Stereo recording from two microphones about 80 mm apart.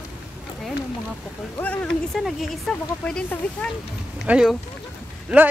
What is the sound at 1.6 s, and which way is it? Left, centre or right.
Rain, centre.